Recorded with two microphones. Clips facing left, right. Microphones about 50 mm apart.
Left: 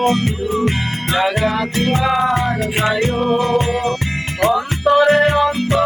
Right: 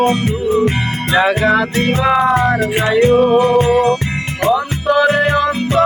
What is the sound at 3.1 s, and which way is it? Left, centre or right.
Music, right.